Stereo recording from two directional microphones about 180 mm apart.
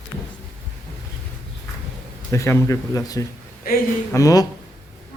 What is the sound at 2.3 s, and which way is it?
A man's voice, 15° left (ahead or behind).